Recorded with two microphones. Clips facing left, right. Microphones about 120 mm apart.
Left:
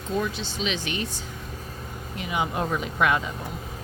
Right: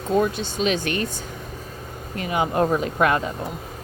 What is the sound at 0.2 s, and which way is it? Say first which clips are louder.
Speech: right 6 dB; 50° right (ahead or behind).